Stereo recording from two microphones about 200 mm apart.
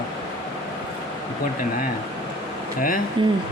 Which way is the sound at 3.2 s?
25° right (ahead or behind).